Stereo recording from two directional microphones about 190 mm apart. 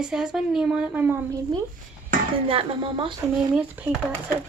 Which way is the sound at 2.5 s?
30° right (ahead or behind).